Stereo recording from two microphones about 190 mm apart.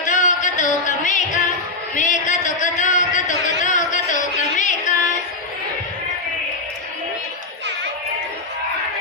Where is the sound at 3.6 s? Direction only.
40° left (ahead or behind).